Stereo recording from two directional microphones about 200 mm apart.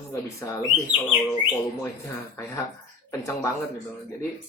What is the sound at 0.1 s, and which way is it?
Speech, 15° left (ahead or behind).